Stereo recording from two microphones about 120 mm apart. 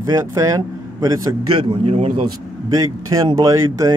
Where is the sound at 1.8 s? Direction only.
60° right (ahead or behind).